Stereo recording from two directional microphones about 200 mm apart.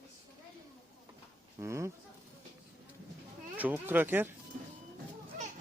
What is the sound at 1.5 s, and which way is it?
Speech, 15° right (ahead or behind).